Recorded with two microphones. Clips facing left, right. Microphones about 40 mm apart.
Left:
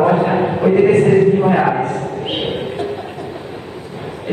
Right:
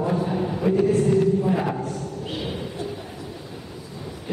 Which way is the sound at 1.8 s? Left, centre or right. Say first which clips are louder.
Left 10 dB; left.